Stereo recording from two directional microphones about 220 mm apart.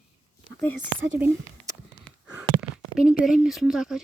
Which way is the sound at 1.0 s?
55° right (ahead or behind).